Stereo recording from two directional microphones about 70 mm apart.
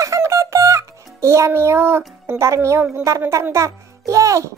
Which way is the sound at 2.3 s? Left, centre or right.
Right.